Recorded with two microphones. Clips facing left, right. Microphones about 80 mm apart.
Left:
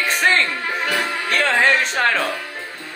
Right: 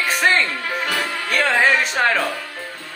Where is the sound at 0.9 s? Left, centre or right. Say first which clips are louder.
Left 1 dB; centre.